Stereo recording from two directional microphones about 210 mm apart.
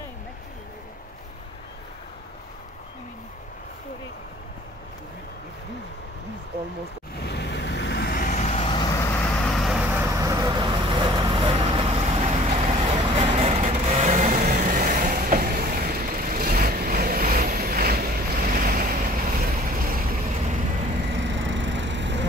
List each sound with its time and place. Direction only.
7.2 s vehicle: 55° left (ahead or behind); by 9.0 s 20° left (ahead or behind)
9.2 s vehicle: centre (ahead or behind)
10.1 s vehicle: 15° right (ahead or behind); by 20.5 s 45° right (ahead or behind)
21.2 s vehicle: 65° right (ahead or behind)